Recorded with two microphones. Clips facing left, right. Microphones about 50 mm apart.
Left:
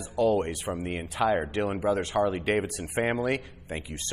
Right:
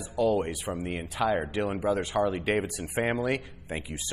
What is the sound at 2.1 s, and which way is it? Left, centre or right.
Speech, left.